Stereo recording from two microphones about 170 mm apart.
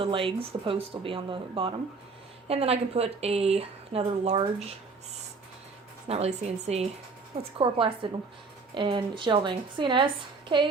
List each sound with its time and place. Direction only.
0.0 s speech: 30° right (ahead or behind)
6.1 s a woman's voice: 40° right (ahead or behind)